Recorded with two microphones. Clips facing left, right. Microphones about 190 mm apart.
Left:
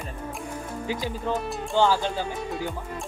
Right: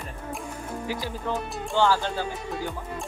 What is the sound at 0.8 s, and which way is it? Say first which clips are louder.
Music: left 2 dB; 20° left (ahead or behind).